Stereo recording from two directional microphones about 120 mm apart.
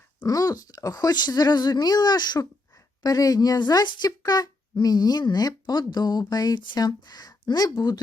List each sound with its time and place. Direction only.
0.2 s speech: 30° left (ahead or behind)